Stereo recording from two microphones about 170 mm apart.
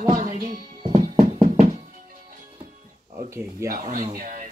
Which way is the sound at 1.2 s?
40° right (ahead or behind).